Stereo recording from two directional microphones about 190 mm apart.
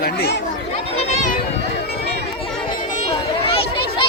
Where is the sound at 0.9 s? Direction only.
35° left (ahead or behind).